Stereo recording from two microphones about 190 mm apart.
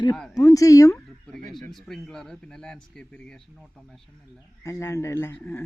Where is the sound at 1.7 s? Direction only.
Centre (ahead or behind).